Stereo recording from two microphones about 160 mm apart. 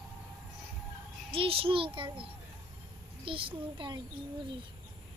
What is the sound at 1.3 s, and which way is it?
Child singing, 35° right (ahead or behind).